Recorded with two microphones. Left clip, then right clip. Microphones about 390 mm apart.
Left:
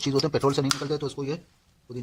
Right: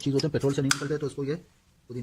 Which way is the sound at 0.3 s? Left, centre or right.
Left.